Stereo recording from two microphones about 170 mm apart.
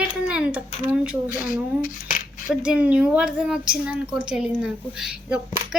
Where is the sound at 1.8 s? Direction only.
50° left (ahead or behind).